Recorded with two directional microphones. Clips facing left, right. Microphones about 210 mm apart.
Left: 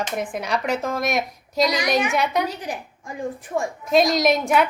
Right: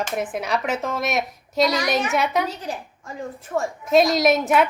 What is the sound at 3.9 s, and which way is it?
Speech, centre (ahead or behind).